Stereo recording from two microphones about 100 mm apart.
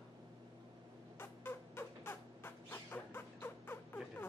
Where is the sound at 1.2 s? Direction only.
20° left (ahead or behind).